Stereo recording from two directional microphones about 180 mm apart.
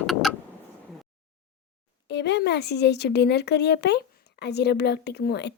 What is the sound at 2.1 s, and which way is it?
A woman's voice, 70° left (ahead or behind).